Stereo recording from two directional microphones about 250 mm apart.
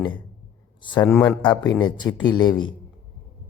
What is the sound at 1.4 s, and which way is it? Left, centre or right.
Speech, centre.